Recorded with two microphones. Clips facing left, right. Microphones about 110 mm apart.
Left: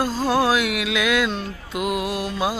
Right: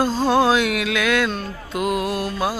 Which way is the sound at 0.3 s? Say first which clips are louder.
Right 2 dB; 5° left (ahead or behind).